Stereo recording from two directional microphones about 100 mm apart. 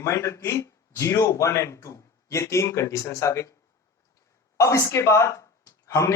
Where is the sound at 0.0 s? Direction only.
30° left (ahead or behind).